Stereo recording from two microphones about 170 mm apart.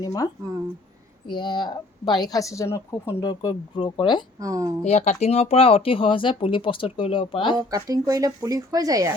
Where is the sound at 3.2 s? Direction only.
25° left (ahead or behind).